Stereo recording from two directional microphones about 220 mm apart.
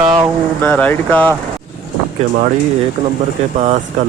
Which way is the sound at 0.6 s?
5° left (ahead or behind).